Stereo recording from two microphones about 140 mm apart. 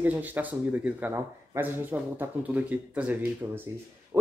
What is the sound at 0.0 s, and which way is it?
Speech, 10° right (ahead or behind).